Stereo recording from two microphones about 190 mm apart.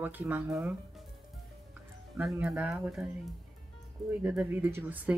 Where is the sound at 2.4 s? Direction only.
5° right (ahead or behind).